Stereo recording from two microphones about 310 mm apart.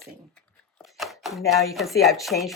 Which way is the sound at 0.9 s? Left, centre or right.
Centre.